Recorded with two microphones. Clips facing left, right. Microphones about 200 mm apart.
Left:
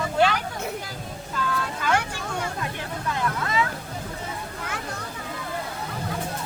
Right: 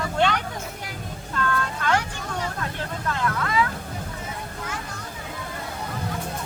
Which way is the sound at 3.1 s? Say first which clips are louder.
Right 1 dB; 25° left (ahead or behind).